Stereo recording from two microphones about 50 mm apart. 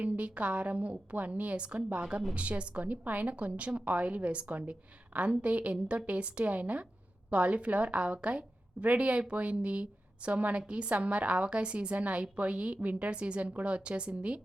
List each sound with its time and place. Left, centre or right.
0.0 s a woman's voice: right